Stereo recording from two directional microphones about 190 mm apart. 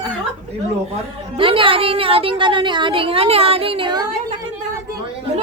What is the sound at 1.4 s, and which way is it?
A woman's voice, 25° right (ahead or behind).